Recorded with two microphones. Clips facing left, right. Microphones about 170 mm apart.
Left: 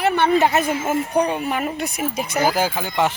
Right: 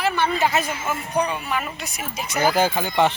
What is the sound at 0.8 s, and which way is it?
Speech, 45° left (ahead or behind).